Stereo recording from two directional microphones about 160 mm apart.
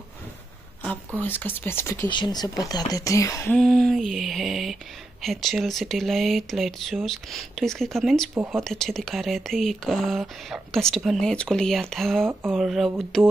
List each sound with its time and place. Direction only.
1.2 s speech: 10° left (ahead or behind)
2.0 s speech: 30° left (ahead or behind)
3.5 s speech: 5° left (ahead or behind)
8.4 s speech: 15° right (ahead or behind)
8.6 s speech: 5° left (ahead or behind)